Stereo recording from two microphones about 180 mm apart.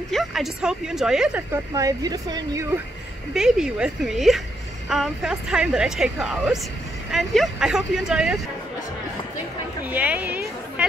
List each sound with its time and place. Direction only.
0.1 s a woman's voice: centre (ahead or behind)
1.7 s speech: 20° right (ahead or behind)
3.3 s a woman's voice: 5° right (ahead or behind)
9.8 s a woman's voice: 10° right (ahead or behind)